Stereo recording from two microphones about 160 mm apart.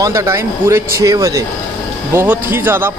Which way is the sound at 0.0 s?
20° right (ahead or behind).